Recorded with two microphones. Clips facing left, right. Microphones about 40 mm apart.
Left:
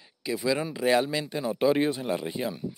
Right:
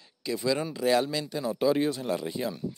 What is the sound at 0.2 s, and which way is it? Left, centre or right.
Speech, centre.